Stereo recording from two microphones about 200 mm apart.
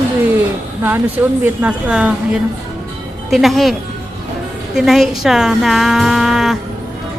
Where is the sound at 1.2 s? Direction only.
10° right (ahead or behind).